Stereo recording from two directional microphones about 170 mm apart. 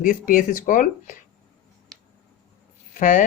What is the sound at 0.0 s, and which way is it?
Speech, 55° left (ahead or behind).